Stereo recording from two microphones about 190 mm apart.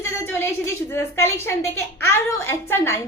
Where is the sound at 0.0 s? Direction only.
10° left (ahead or behind).